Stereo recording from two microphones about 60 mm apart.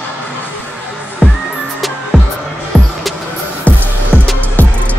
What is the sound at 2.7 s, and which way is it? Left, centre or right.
Music, centre.